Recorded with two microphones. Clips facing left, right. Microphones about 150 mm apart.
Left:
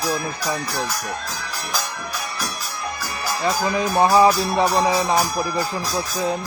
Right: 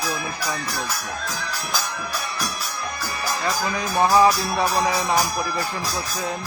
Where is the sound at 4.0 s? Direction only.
25° left (ahead or behind).